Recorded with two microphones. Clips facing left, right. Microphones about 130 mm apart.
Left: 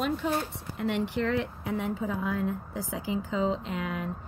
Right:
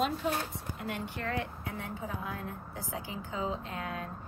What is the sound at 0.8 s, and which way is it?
Speech, 90° left.